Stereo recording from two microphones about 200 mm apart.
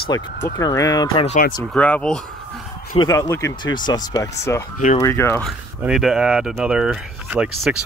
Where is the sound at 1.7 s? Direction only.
5° left (ahead or behind).